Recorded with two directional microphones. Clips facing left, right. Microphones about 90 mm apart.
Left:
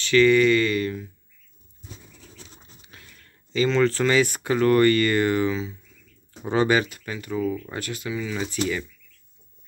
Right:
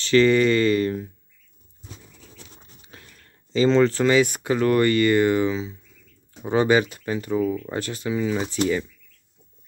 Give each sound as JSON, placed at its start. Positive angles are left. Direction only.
{"t": 0.0, "sound": "speech", "side_deg": -30}
{"t": 2.9, "sound": "speech", "side_deg": -30}
{"t": 6.9, "sound": "speech", "side_deg": -30}
{"t": 7.4, "sound": "speech", "side_deg": -10}
{"t": 7.7, "sound": "speech", "side_deg": -30}